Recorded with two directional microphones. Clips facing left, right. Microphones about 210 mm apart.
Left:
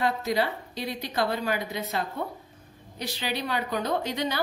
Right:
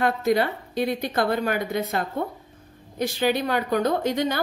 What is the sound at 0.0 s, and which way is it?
A woman's voice, 55° right (ahead or behind).